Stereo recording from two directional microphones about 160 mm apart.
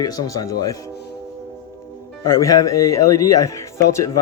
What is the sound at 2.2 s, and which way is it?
Speech, 20° left (ahead or behind).